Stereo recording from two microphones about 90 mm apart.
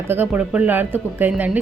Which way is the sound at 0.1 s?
20° right (ahead or behind).